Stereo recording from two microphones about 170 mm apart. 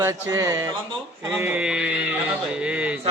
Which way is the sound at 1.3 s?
10° right (ahead or behind).